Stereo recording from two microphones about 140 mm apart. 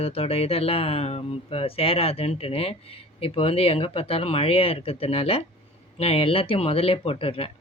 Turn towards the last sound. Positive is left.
turn(degrees=45)  # may be behind; listen again after turning